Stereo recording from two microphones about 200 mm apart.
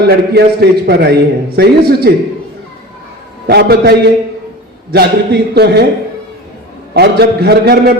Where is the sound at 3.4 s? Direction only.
55° right (ahead or behind).